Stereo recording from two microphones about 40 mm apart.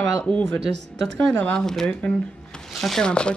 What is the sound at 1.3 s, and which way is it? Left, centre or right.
Speech, left.